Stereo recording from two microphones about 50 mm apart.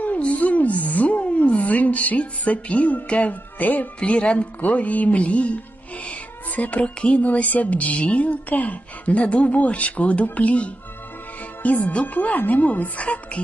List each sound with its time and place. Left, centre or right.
0.0 s speech: left
6.6 s a woman's voice: left